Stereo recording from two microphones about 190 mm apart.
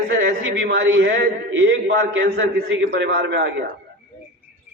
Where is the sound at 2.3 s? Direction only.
65° right (ahead or behind).